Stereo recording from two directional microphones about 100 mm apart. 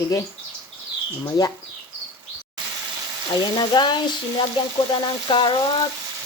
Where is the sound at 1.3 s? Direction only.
40° left (ahead or behind).